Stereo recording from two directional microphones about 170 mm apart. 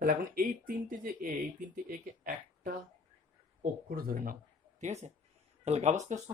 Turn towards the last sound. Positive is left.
turn(degrees=-40)  # may be behind; listen again after turning